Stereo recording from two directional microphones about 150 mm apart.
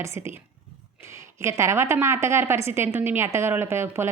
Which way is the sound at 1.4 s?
20° right (ahead or behind).